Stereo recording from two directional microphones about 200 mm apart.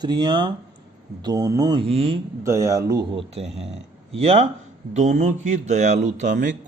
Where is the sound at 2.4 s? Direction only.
15° right (ahead or behind).